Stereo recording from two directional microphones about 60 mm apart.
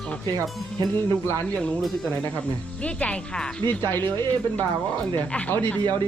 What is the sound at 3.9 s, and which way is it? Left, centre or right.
Speech, left.